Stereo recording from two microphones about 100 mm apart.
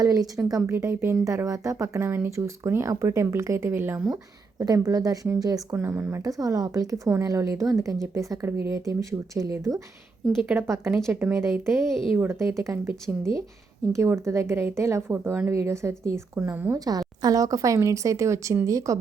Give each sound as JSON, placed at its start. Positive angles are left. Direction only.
{"t": 0.0, "sound": "a woman's voice", "side_deg": -40}
{"t": 4.6, "sound": "a woman's voice", "side_deg": -35}
{"t": 12.1, "sound": "speech", "side_deg": -20}
{"t": 12.4, "sound": "a woman's voice", "side_deg": -30}
{"t": 16.7, "sound": "speech", "side_deg": -40}